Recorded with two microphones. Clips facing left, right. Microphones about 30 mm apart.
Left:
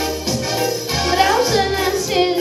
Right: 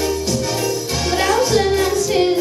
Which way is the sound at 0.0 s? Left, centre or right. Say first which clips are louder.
Right 2 dB; centre.